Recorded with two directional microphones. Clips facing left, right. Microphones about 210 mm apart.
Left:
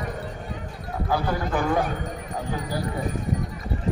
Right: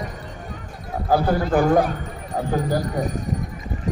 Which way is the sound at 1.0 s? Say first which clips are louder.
Right 6 dB; 40° right (ahead or behind).